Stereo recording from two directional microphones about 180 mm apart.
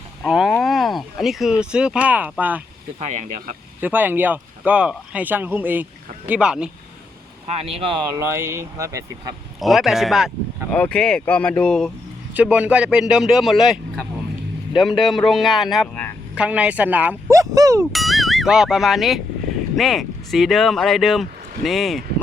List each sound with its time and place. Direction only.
0.3 s speech: centre (ahead or behind)
0.6 s a sound: centre (ahead or behind)
1.7 s speech: 5° right (ahead or behind)
3.0 s speech: 40° right (ahead or behind)
3.8 s speech: 10° right (ahead or behind)
7.5 s speech: 30° right (ahead or behind)
9.6 s speech: centre (ahead or behind)
12.3 s speech: 10° right (ahead or behind)
17.9 s speech: centre (ahead or behind)